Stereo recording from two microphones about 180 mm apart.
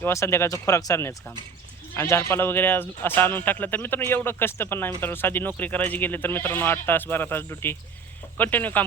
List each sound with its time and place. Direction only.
0.0 s speech: 15° left (ahead or behind)